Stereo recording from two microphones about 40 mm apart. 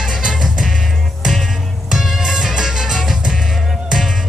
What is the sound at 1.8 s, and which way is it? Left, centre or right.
Music, centre.